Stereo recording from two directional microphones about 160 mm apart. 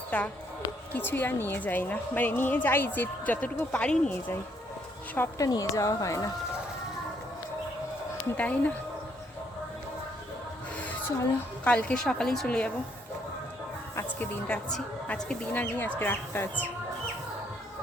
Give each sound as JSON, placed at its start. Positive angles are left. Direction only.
{"t": 0.1, "sound": "a woman's voice", "side_deg": 10}
{"t": 8.4, "sound": "a woman's voice", "side_deg": 10}
{"t": 11.6, "sound": "a woman's voice", "side_deg": 10}
{"t": 13.9, "sound": "a woman's voice", "side_deg": 10}